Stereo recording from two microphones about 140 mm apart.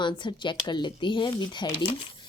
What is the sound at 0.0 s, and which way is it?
A woman's voice, 35° left (ahead or behind).